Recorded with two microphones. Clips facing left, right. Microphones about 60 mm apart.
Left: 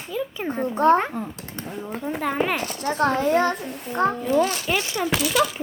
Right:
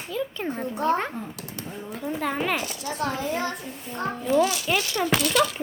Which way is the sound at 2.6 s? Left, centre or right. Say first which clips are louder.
Left 6 dB; left.